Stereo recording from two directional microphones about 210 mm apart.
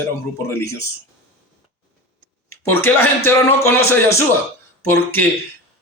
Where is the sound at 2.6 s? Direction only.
10° left (ahead or behind).